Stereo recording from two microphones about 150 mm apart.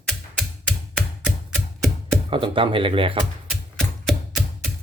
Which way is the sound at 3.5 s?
Centre (ahead or behind).